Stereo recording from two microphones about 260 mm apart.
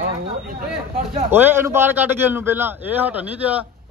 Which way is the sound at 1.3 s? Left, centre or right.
Centre.